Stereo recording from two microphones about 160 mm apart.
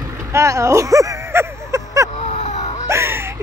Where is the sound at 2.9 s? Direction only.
15° right (ahead or behind).